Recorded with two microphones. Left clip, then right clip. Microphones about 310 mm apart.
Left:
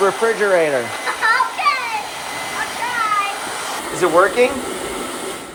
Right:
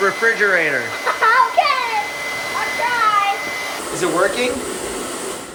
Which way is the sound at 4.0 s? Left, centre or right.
Centre.